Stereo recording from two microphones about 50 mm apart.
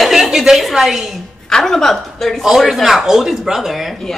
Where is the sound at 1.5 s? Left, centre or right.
Centre.